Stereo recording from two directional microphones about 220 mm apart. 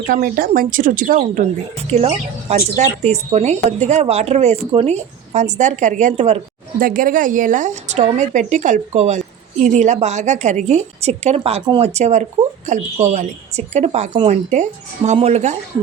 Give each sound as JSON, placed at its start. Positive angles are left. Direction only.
{"t": 0.1, "sound": "speech", "side_deg": -40}